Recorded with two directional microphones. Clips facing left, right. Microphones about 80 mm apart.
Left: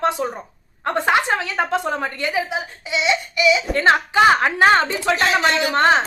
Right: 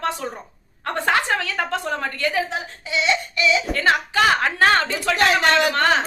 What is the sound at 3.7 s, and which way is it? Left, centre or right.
A woman's voice, left.